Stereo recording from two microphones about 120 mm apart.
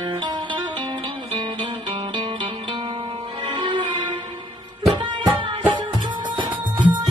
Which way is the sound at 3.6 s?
40° right (ahead or behind).